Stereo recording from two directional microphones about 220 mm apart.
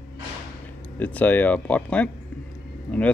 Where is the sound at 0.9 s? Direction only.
5° left (ahead or behind).